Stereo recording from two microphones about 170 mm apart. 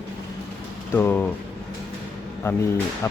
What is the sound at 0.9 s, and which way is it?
Speech, 10° left (ahead or behind).